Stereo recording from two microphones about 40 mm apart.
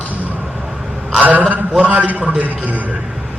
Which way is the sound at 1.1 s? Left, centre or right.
Right.